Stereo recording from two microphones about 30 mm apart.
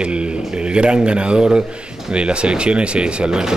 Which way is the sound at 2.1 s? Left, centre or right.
Right.